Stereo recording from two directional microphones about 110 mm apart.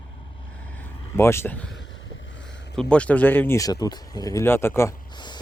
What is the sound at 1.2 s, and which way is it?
Speech, 25° left (ahead or behind).